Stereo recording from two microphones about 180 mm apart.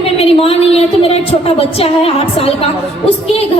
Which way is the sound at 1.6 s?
35° left (ahead or behind).